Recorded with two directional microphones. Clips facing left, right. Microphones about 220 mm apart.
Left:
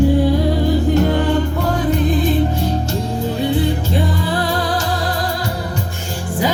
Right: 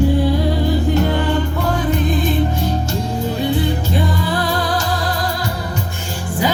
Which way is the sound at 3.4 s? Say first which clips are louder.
Left 2 dB; 30° left (ahead or behind).